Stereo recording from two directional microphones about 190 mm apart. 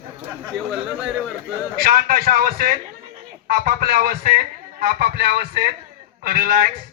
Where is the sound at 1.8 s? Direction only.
50° right (ahead or behind).